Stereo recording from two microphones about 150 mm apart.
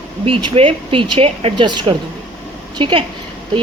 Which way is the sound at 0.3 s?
35° right (ahead or behind).